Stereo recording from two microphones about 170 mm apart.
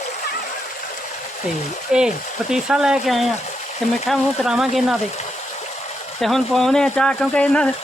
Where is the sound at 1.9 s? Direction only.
5° right (ahead or behind).